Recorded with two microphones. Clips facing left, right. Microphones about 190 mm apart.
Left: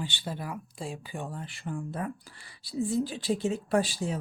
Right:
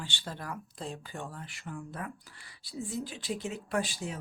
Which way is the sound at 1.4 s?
30° left (ahead or behind).